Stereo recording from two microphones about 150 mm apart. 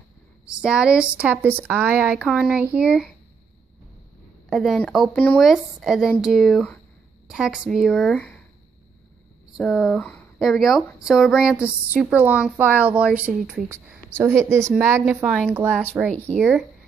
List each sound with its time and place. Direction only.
0.5 s a woman's voice: 5° right (ahead or behind)
4.5 s speech: centre (ahead or behind)
5.4 s speech: centre (ahead or behind)
9.6 s a woman's voice: centre (ahead or behind); by 15.0 s 15° right (ahead or behind)
15.2 s a woman's voice: centre (ahead or behind)